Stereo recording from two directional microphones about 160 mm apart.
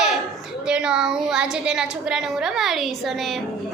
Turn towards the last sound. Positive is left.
turn(degrees=0)  # may be behind; listen again after turning